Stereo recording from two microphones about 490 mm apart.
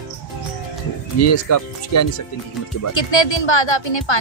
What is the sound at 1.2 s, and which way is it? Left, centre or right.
Speech, left.